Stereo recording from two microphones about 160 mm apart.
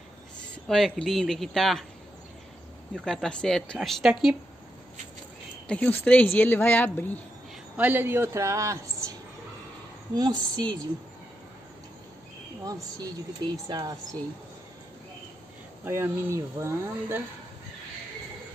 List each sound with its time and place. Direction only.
0.7 s speech: centre (ahead or behind)
3.1 s speech: 5° left (ahead or behind)
5.7 s speech: 5° left (ahead or behind)
7.7 s speech: 10° right (ahead or behind)
10.1 s a woman's voice: 25° right (ahead or behind)
12.6 s a woman's voice: 20° right (ahead or behind)
15.8 s speech: 15° right (ahead or behind)